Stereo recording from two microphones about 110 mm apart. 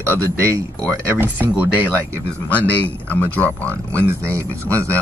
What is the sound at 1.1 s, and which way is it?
Speech, 15° right (ahead or behind).